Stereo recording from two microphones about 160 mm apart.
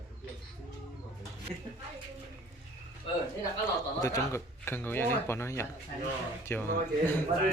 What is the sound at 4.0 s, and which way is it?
Speech, 20° left (ahead or behind).